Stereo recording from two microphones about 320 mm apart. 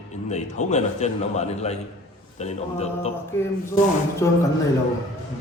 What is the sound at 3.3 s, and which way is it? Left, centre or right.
Speech, centre.